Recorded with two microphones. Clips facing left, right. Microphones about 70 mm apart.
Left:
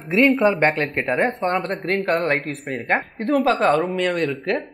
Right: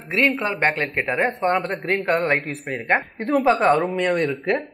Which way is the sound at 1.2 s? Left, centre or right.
Centre.